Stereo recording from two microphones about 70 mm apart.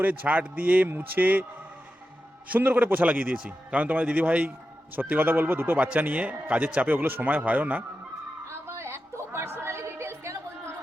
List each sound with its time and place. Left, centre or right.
0.0 s a man's voice: right
2.5 s a man's voice: right
5.7 s a man's voice: centre
8.6 s a sound: right